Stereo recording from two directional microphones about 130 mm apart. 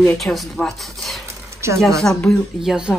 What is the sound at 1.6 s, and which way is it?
Speech, 20° right (ahead or behind).